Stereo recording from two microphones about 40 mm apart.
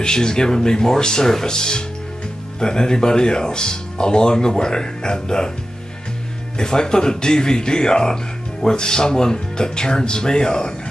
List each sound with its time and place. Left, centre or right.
0.0 s speech: centre
6.6 s speech: centre